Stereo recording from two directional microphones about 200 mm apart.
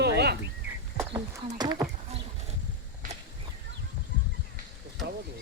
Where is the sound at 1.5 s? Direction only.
20° right (ahead or behind).